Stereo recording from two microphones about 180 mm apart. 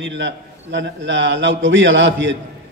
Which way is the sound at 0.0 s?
90° right.